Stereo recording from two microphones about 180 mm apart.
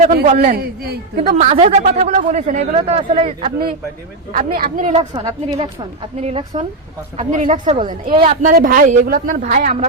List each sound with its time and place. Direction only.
0.5 s speech: 65° right (ahead or behind)
1.4 s speech: 35° right (ahead or behind)
4.3 s a woman's voice: 50° right (ahead or behind)
5.1 s a woman's voice: 20° right (ahead or behind)
6.1 s a woman's voice: 35° right (ahead or behind)